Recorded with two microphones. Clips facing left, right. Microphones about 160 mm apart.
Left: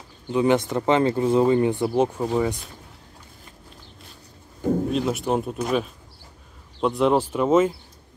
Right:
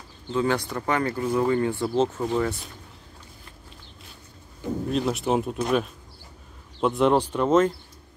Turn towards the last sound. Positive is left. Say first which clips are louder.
# left 1 dB
turn(degrees=5)  # may be behind; listen again after turning